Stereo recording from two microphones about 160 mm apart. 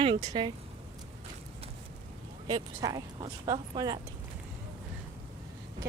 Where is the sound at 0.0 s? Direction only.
30° right (ahead or behind).